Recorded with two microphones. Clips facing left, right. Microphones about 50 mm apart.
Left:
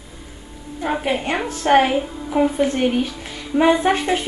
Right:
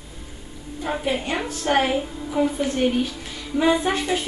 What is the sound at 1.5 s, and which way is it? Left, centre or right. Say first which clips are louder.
A woman's voice: left 6 dB; left.